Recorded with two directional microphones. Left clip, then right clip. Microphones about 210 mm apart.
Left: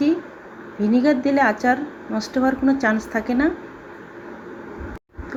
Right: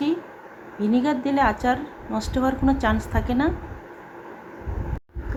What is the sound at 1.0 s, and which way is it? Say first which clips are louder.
Speech: left 4 dB; 5° left (ahead or behind).